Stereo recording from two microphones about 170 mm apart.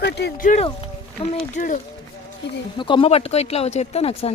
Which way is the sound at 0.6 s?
35° left (ahead or behind).